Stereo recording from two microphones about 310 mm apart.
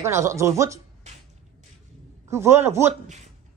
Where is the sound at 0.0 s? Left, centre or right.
Centre.